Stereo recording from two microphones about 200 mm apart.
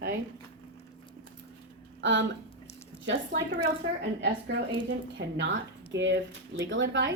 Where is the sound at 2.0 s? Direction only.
65° right (ahead or behind).